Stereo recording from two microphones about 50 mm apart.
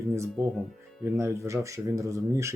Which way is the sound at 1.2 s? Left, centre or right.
Right.